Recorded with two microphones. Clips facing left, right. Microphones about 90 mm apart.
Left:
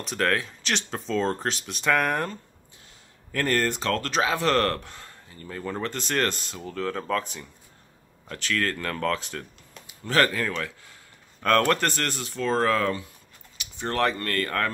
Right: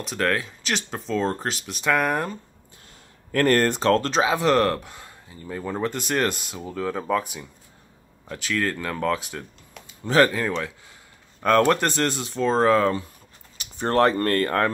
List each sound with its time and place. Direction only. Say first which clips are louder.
0.0 s speech: right 1 dB; centre (ahead or behind)
3.3 s speech: right 6 dB; 50° right (ahead or behind); by 13.0 s 25° right (ahead or behind)
13.6 s speech: right 6 dB; 35° right (ahead or behind)